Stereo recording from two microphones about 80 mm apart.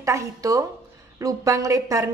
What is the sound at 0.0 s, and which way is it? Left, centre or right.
A woman's voice, right.